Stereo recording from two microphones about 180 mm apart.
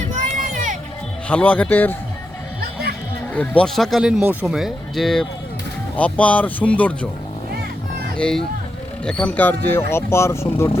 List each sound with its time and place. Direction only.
0.5 s music: 45° right (ahead or behind)
1.3 s speech: 10° left (ahead or behind)
3.3 s speech: 5° left (ahead or behind)
8.1 s speech: 5° left (ahead or behind)